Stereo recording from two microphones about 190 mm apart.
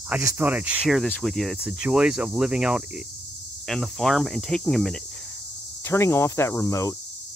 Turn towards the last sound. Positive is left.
turn(degrees=15)  # may be behind; listen again after turning